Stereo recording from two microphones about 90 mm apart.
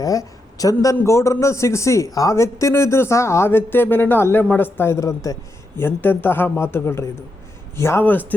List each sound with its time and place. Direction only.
0.0 s a man's voice: 40° left (ahead or behind)
5.7 s a man's voice: 25° left (ahead or behind)